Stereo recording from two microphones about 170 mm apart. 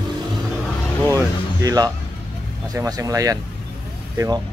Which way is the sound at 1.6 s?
20° right (ahead or behind).